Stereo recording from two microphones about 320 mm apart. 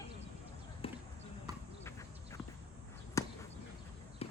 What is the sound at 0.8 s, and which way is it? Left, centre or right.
Basketball bounce, centre.